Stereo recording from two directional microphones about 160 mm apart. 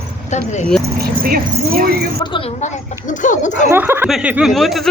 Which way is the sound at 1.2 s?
65° right (ahead or behind).